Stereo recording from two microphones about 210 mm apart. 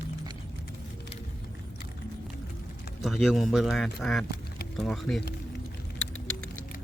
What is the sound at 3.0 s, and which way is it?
Speech, centre (ahead or behind).